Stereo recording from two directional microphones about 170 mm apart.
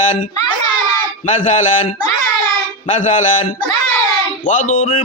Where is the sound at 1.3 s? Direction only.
45° left (ahead or behind).